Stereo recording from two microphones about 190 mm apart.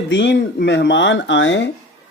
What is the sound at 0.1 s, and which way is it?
Speech, 65° left (ahead or behind).